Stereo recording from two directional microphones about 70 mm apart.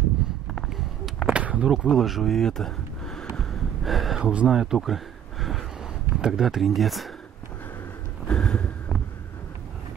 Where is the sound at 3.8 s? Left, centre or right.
Centre.